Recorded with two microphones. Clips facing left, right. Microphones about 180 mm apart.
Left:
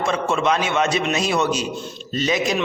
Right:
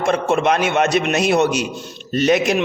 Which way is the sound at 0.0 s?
55° right (ahead or behind).